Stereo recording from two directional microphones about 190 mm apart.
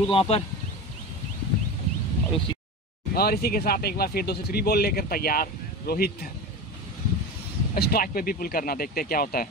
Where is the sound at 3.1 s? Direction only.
55° left (ahead or behind).